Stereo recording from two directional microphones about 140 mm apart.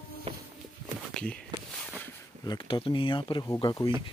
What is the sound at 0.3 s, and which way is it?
Walk, 40° right (ahead or behind).